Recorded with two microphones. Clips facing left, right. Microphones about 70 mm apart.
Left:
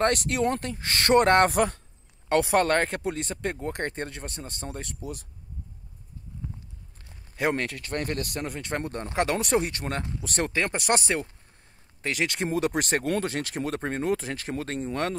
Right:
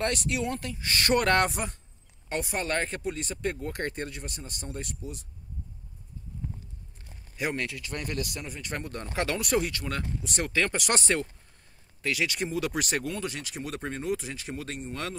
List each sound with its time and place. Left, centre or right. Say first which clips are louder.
0.0 s speech: left 5 dB; left
1.5 s speech: left 10 dB; left
2.7 s speech: left 5 dB; left
3.2 s speech: left 1 dB; left
7.3 s speech: left 5 dB; left
10.5 s speech: left 1 dB; left
12.0 s speech: left 1 dB; left
13.2 s speech: left 6 dB; left